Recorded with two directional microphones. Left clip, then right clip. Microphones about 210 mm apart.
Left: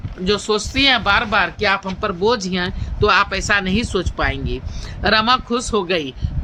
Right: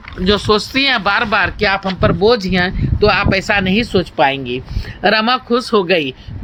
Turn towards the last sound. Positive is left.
turn(degrees=-15)  # may be behind; listen again after turning